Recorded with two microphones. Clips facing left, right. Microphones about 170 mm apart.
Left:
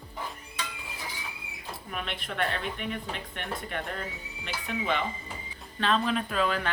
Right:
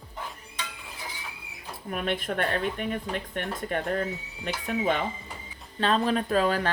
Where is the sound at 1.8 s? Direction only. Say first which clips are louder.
Right 8 dB; 45° right (ahead or behind).